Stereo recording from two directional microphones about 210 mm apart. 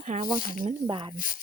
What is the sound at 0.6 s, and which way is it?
Speech, 25° right (ahead or behind).